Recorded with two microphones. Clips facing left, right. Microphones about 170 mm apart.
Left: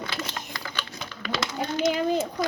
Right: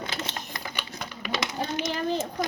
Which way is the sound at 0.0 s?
20° right (ahead or behind).